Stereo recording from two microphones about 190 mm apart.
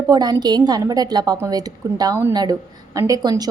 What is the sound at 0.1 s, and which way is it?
A woman's voice, 20° right (ahead or behind).